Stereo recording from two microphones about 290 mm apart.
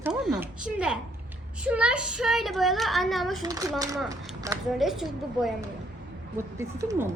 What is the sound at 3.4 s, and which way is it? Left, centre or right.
Speech, centre.